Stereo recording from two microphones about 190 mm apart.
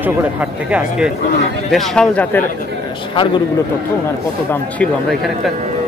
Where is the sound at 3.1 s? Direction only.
25° left (ahead or behind).